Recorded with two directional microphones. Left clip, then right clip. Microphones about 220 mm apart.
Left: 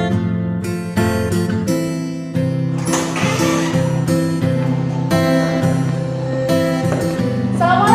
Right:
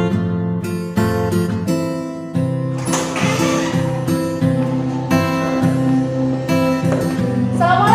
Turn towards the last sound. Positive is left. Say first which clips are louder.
# even
turn(degrees=0)  # may be behind; listen again after turning